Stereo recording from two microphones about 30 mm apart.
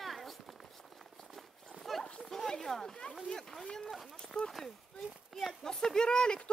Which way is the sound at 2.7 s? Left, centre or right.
Left.